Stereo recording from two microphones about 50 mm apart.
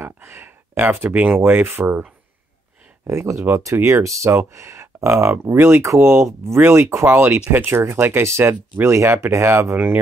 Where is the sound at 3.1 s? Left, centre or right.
Right.